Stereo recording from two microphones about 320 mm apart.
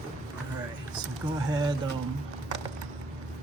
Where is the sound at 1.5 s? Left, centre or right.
Centre.